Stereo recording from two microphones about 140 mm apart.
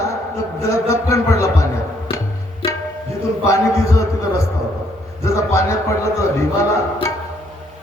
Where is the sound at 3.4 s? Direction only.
20° left (ahead or behind).